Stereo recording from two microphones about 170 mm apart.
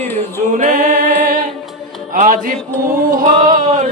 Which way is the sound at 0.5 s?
50° right (ahead or behind).